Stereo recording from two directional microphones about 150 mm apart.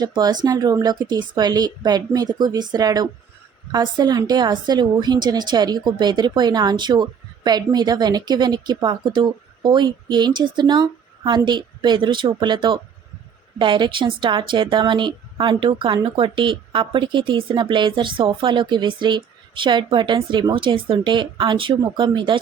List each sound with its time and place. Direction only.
0.0 s a woman's voice: 25° right (ahead or behind)